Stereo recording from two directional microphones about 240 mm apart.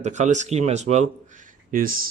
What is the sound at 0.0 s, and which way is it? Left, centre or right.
Speech, right.